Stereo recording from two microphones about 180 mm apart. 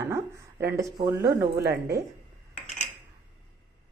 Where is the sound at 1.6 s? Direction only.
65° right (ahead or behind).